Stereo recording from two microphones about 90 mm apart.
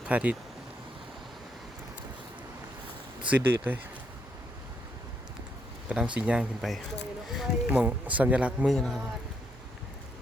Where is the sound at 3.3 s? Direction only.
20° right (ahead or behind).